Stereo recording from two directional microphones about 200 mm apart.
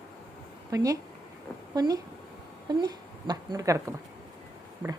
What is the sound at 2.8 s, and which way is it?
A woman's voice, 20° right (ahead or behind).